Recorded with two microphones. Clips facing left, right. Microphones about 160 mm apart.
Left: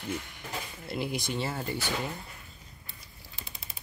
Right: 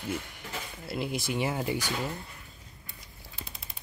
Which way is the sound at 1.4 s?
15° right (ahead or behind).